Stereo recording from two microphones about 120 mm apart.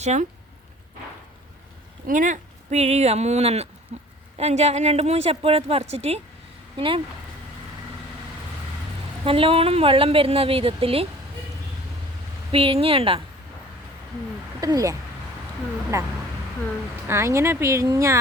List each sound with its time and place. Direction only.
0.0 s speech: 75° right (ahead or behind)
2.1 s speech: 90° right; by 6.2 s 60° right (ahead or behind)
6.7 s a woman's voice: 45° right (ahead or behind)
9.2 s a woman's voice: 50° right (ahead or behind)
12.5 s a woman's voice: 50° right (ahead or behind)
14.6 s speech: 30° right (ahead or behind)